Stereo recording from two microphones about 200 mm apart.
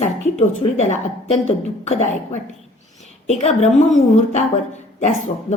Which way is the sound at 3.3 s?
35° left (ahead or behind).